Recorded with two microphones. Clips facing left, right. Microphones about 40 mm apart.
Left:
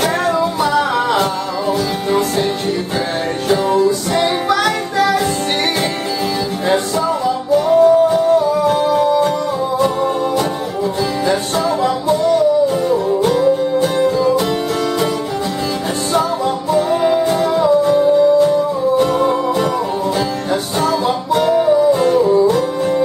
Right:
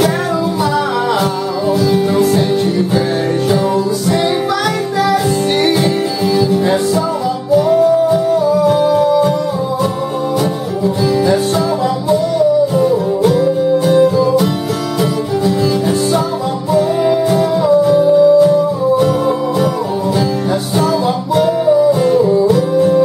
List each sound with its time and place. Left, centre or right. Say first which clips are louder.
7.5 s music: even; centre
12.9 s music: right 2 dB; centre
16.7 s music: right 2 dB; centre
21.4 s music: right 2 dB; centre